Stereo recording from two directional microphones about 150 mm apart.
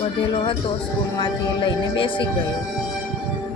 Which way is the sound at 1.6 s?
35° left (ahead or behind).